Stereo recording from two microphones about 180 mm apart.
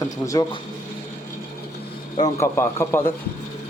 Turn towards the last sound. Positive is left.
turn(degrees=15)  # may be behind; listen again after turning